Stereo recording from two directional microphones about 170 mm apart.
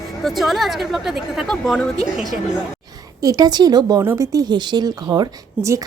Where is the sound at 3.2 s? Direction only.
25° right (ahead or behind).